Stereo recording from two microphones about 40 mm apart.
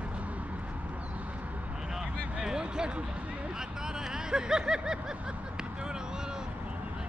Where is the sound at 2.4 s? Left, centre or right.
Centre.